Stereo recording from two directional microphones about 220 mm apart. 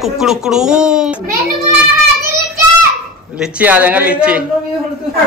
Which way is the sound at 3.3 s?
5° right (ahead or behind).